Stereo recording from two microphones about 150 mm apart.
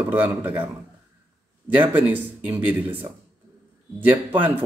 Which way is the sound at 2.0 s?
10° right (ahead or behind).